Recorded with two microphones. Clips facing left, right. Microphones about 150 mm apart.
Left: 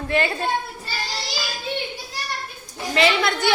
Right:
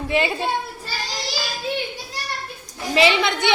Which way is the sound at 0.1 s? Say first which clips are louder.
Even; 5° right (ahead or behind).